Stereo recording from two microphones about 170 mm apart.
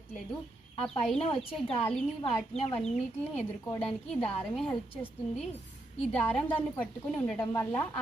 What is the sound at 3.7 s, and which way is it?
A woman's voice, 5° left (ahead or behind).